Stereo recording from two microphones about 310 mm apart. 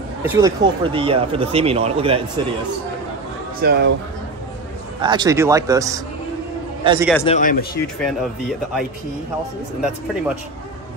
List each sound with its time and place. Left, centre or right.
0.2 s speech: centre
3.6 s speech: right
5.0 s a man's voice: centre
7.2 s speech: left
8.0 s speech: centre